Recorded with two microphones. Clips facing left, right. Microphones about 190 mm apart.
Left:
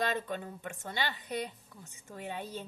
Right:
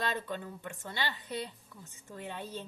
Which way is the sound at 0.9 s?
15° left (ahead or behind).